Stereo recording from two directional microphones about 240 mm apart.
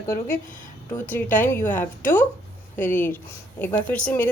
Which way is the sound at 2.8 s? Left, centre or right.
Centre.